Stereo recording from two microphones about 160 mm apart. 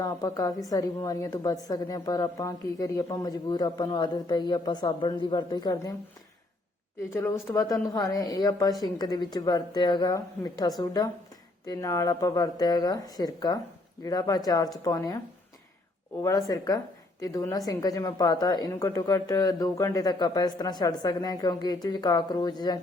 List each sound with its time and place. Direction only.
0.0 s a woman's voice: 20° left (ahead or behind)
7.1 s a woman's voice: 20° left (ahead or behind)
16.2 s a woman's voice: 20° left (ahead or behind)